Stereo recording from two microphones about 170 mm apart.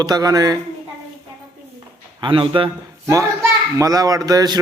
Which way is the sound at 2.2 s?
30° right (ahead or behind).